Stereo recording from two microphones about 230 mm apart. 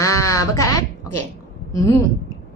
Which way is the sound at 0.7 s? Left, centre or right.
Left.